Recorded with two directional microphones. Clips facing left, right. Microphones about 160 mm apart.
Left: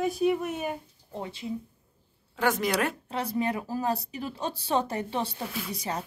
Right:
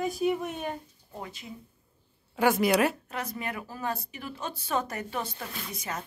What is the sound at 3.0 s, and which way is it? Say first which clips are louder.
Speech: left 6 dB; 30° left (ahead or behind).